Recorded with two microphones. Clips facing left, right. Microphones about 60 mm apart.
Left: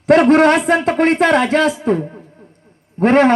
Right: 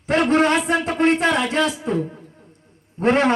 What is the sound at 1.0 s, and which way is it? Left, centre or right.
Speech, left.